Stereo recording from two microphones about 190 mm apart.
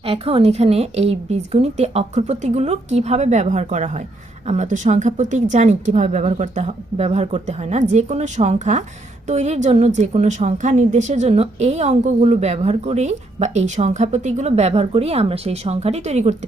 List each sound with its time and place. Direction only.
0.0 s a woman's voice: 30° right (ahead or behind)